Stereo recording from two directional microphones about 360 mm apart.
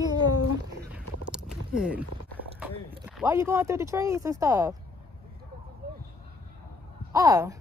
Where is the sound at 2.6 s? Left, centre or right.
Centre.